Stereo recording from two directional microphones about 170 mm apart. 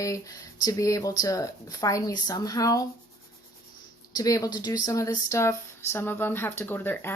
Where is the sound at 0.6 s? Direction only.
20° left (ahead or behind).